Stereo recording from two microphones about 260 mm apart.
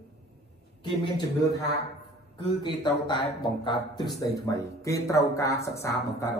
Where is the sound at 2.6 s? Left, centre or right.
Centre.